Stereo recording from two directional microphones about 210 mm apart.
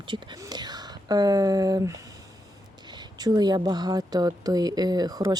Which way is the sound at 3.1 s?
20° right (ahead or behind).